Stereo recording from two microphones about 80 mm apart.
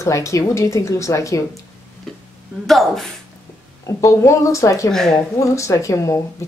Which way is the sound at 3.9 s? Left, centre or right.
Left.